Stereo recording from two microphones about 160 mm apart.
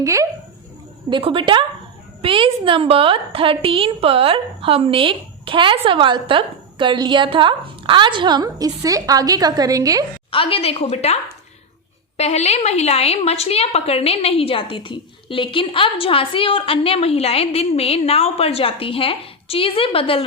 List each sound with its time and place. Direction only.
0.0 s speech: 20° right (ahead or behind)
1.1 s a woman's voice: 30° right (ahead or behind)
10.3 s a woman's voice: 35° left (ahead or behind)